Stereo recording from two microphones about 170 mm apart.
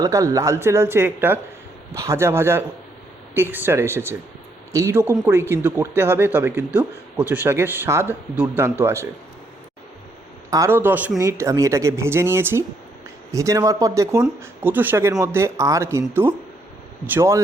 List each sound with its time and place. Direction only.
0.0 s speech: 20° right (ahead or behind)
10.5 s speech: 15° right (ahead or behind)